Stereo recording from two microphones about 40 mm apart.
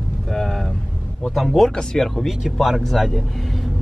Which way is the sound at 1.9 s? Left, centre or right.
Centre.